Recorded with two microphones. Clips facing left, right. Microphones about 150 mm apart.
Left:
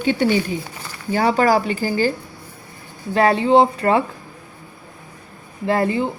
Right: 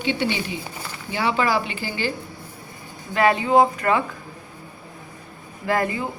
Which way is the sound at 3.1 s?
35° left (ahead or behind).